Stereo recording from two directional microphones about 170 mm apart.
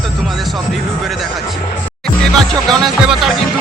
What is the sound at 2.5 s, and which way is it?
Speech, centre (ahead or behind).